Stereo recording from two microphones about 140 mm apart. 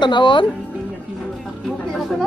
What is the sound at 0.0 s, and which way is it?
Speech, 35° left (ahead or behind).